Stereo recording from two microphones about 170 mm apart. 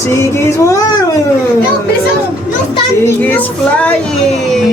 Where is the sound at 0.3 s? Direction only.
15° left (ahead or behind).